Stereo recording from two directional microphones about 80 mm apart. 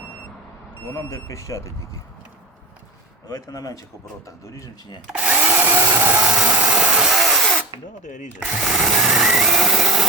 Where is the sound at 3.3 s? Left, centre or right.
Left.